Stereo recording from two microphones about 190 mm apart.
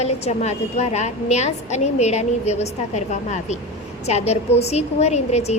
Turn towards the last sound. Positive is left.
turn(degrees=35)  # may be behind; listen again after turning